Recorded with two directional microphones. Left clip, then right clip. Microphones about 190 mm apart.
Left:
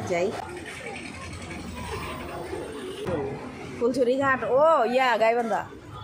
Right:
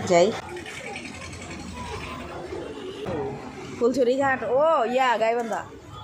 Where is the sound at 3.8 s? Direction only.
20° right (ahead or behind).